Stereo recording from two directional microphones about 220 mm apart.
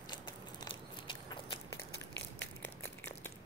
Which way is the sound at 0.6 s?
20° left (ahead or behind).